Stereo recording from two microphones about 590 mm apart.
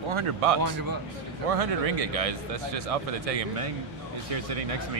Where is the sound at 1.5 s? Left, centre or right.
Right.